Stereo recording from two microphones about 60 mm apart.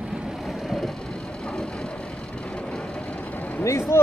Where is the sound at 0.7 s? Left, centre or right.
Centre.